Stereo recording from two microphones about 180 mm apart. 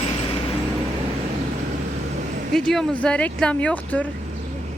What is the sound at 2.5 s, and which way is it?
Speech, centre (ahead or behind).